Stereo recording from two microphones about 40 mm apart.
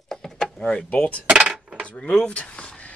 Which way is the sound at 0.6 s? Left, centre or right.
Left.